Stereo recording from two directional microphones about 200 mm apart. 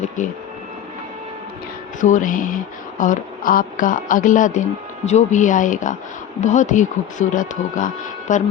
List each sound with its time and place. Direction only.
0.2 s speech: 40° left (ahead or behind)
2.0 s speech: 40° left (ahead or behind)